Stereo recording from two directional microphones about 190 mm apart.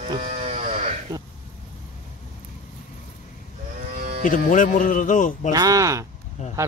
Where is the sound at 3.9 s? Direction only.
50° right (ahead or behind).